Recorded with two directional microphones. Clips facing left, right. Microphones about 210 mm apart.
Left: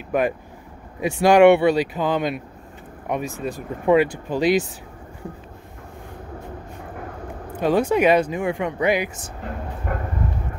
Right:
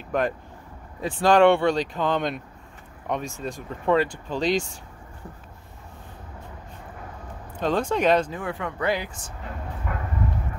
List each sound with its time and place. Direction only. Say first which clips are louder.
0.1 s speech: left 4 dB; 5° left (ahead or behind)
7.5 s speech: left 5 dB; 10° left (ahead or behind)
9.9 s a sound: left 5 dB; 45° left (ahead or behind)